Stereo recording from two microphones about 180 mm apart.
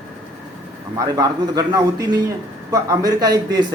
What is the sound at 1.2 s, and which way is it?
Speech, 20° right (ahead or behind).